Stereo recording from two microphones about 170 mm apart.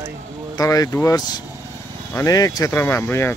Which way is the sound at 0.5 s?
20° left (ahead or behind).